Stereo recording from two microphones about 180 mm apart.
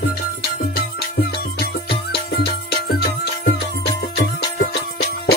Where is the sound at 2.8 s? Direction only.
65° left (ahead or behind).